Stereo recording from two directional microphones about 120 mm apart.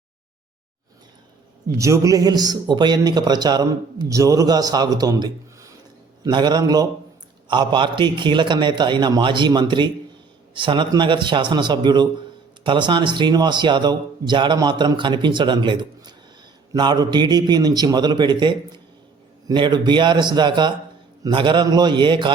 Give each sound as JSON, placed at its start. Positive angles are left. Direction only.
{"t": 1.8, "sound": "speech", "side_deg": -25}